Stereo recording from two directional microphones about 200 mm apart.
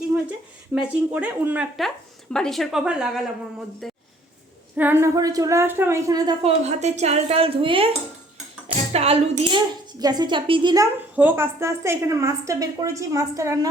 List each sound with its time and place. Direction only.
0.3 s a woman's voice: 5° right (ahead or behind)
3.8 s a sound: centre (ahead or behind)
4.8 s a woman's voice: 10° right (ahead or behind)
6.4 s a woman's voice: 35° right (ahead or behind)
8.9 s a woman's voice: 30° right (ahead or behind)
10.0 s a woman's voice: 20° right (ahead or behind)
11.1 s a woman's voice: 10° right (ahead or behind)